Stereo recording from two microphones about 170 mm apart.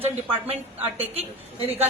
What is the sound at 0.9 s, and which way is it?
Speech, 35° right (ahead or behind).